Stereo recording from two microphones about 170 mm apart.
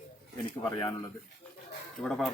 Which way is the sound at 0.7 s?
20° left (ahead or behind).